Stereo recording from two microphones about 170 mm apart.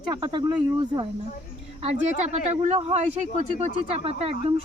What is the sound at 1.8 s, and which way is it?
Speech, 40° right (ahead or behind).